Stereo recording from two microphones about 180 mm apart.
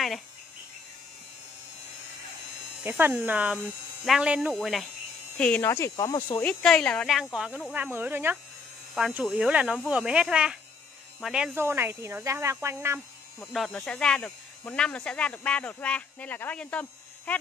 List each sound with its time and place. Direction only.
2.8 s speech: 10° right (ahead or behind)
5.4 s speech: 10° left (ahead or behind)
6.4 s speech: 5° left (ahead or behind)
11.5 s speech: 10° right (ahead or behind)
13.4 s speech: centre (ahead or behind)